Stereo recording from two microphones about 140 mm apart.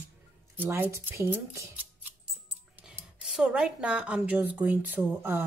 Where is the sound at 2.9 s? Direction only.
5° right (ahead or behind).